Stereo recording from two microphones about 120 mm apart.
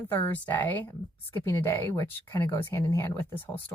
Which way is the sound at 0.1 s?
15° left (ahead or behind).